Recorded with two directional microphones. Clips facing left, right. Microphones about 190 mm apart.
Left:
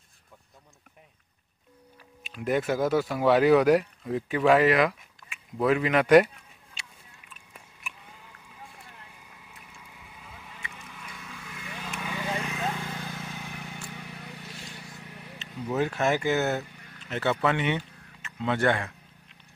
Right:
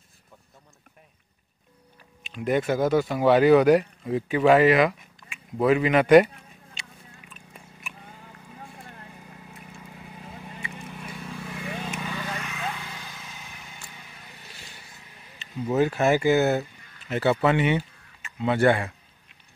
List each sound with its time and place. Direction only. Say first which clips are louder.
2.2 s speech: right 2 dB; centre (ahead or behind)
9.8 s vehicle: right 8 dB; 45° right (ahead or behind)
12.1 s vehicle: left 2 dB; 15° left (ahead or behind); by 14.5 s 65° left (ahead or behind)
14.5 s vehicle: left 5 dB; centre (ahead or behind)
14.8 s vehicle: left 6 dB; 65° left (ahead or behind)
15.3 s speech: right 5 dB; 5° right (ahead or behind)